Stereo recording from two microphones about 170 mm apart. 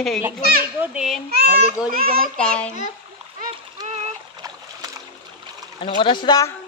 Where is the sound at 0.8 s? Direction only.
5° right (ahead or behind).